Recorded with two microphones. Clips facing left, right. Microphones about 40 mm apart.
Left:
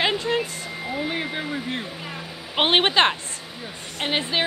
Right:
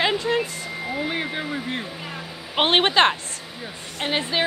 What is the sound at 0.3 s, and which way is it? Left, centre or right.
Vehicle, centre.